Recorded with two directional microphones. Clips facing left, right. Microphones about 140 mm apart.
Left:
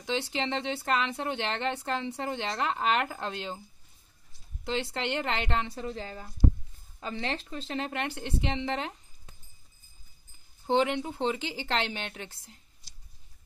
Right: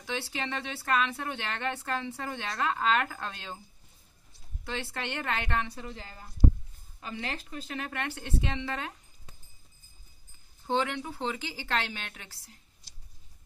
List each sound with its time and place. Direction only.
0.0 s speech: 25° left (ahead or behind)
4.6 s speech: 20° left (ahead or behind)
10.7 s speech: 20° left (ahead or behind)